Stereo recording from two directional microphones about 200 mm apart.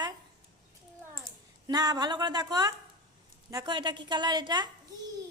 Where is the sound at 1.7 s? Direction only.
20° right (ahead or behind).